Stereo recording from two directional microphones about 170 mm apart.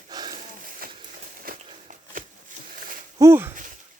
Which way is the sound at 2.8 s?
55° right (ahead or behind).